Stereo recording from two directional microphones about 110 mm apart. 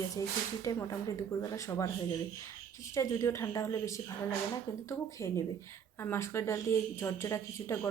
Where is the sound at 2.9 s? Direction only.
30° left (ahead or behind).